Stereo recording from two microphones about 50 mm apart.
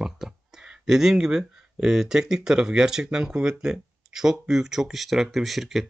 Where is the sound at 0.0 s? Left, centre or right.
Centre.